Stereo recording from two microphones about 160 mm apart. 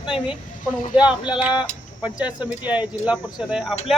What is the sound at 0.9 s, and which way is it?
Speech, 30° left (ahead or behind).